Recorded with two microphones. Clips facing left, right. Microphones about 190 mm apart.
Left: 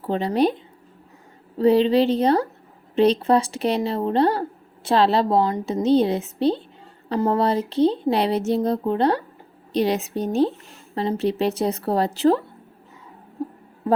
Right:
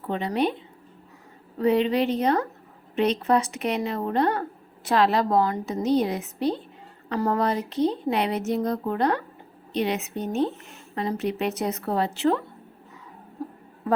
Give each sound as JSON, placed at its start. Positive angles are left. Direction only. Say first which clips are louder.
{"t": 0.0, "sound": "a woman's voice", "louder": "left 5 dB", "side_deg": 35}
{"t": 1.5, "sound": "a woman's voice", "louder": "left 5 dB", "side_deg": 30}
{"t": 13.4, "sound": "a sound", "louder": "left 5 dB", "side_deg": 20}